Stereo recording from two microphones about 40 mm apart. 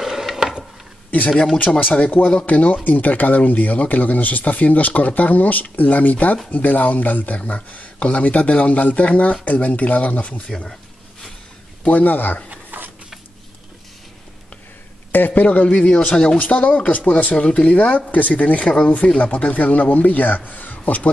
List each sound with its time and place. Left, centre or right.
0.0 s wood: centre
1.3 s speech: centre
1.8 s speech: left
11.8 s a man's voice: left
12.7 s a sound: right
15.1 s a man's voice: left
15.7 s speech: left
16.3 s a man's voice: left